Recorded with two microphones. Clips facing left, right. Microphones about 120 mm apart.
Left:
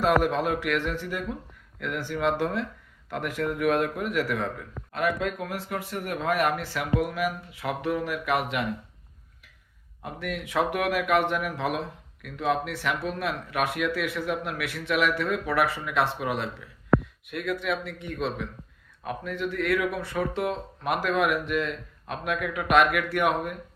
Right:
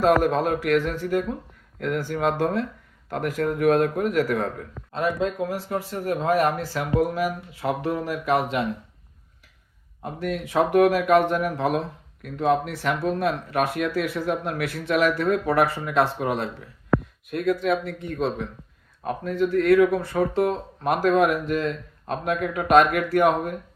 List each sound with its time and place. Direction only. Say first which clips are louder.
0.0 s speech: right 4 dB; 40° right (ahead or behind)
4.9 s speech: right 3 dB; 25° right (ahead or behind)
10.0 s speech: right 5 dB; 35° right (ahead or behind)